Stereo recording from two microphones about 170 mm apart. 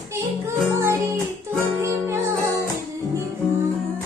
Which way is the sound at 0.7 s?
15° right (ahead or behind).